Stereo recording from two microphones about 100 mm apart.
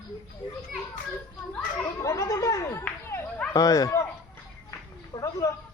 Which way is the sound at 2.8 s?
20° left (ahead or behind).